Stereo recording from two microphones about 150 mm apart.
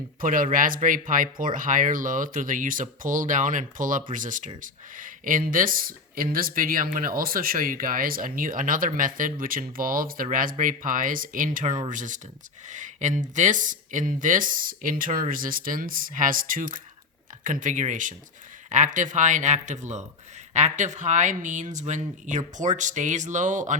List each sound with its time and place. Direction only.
0.2 s speech: 65° right (ahead or behind)